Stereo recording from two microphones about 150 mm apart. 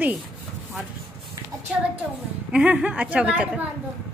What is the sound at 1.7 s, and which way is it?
A woman's voice, 5° right (ahead or behind).